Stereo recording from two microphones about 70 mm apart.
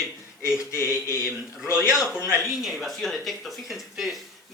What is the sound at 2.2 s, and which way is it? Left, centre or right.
Speech, left.